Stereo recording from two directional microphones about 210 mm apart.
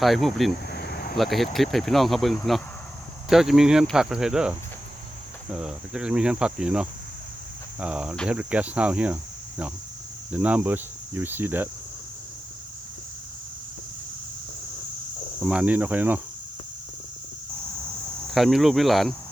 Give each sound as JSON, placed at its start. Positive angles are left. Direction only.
{"t": 0.0, "sound": "cricket", "side_deg": 0}
{"t": 0.7, "sound": "a sound", "side_deg": 45}
{"t": 1.1, "sound": "cricket", "side_deg": 0}
{"t": 5.5, "sound": "cricket", "side_deg": -5}
{"t": 10.3, "sound": "cricket", "side_deg": -5}
{"t": 15.4, "sound": "cricket", "side_deg": -5}
{"t": 18.3, "sound": "cricket", "side_deg": 0}